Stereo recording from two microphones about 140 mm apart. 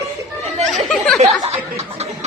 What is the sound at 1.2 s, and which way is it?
Chuckle, 50° right (ahead or behind).